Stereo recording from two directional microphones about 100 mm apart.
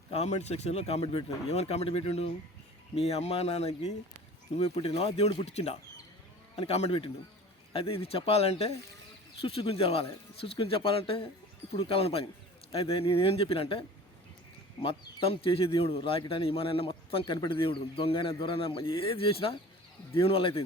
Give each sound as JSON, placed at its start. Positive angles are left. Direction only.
{"t": 0.1, "sound": "speech", "side_deg": 90}
{"t": 7.7, "sound": "speech", "side_deg": 70}
{"t": 9.4, "sound": "speech", "side_deg": 70}
{"t": 17.3, "sound": "a man's voice", "side_deg": 55}